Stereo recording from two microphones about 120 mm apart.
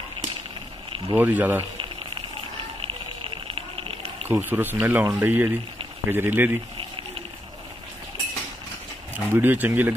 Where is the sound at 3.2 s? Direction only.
50° right (ahead or behind).